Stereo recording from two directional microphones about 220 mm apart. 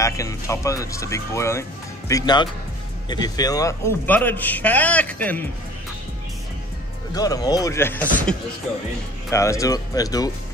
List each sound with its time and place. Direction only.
0.0 s speech: 15° left (ahead or behind)
7.2 s speech: 15° left (ahead or behind)